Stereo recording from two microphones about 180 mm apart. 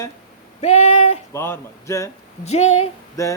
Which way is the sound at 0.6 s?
40° left (ahead or behind).